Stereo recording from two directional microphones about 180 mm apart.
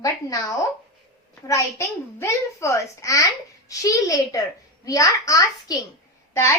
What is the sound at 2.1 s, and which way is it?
A child's voice, 15° left (ahead or behind).